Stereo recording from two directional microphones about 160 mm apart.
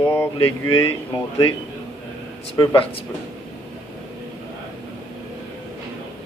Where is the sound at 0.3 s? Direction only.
35° left (ahead or behind).